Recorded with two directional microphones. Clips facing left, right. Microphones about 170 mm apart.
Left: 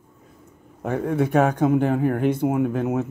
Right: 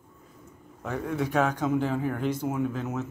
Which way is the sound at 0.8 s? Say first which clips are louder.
Left 7 dB; 55° left (ahead or behind).